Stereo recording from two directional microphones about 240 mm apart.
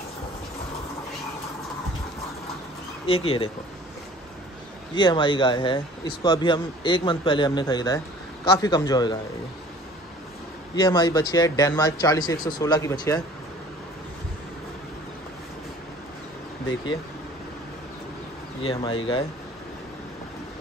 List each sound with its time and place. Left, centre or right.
3.1 s speech: left
4.9 s speech: centre
10.8 s speech: centre
18.6 s speech: left